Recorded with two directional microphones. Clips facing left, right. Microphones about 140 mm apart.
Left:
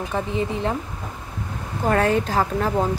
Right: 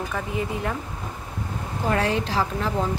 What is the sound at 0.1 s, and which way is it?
Speech, 30° left (ahead or behind).